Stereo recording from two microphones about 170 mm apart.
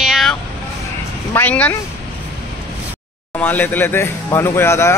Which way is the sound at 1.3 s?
10° left (ahead or behind).